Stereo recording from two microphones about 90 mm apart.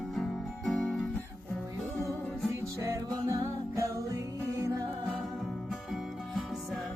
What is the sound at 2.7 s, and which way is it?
Music, 35° right (ahead or behind).